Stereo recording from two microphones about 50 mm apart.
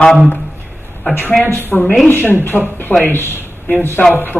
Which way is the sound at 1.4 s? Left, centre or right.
Left.